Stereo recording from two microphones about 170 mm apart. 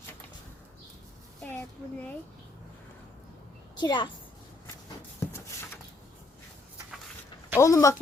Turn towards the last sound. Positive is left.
turn(degrees=20)  # may be behind; listen again after turning